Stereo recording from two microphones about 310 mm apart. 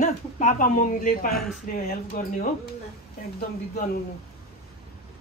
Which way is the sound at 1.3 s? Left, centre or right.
Centre.